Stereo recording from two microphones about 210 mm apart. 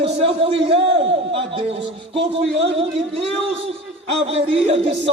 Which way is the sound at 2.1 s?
25° right (ahead or behind).